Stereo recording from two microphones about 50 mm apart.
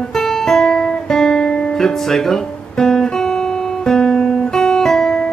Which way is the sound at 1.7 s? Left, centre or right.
Centre.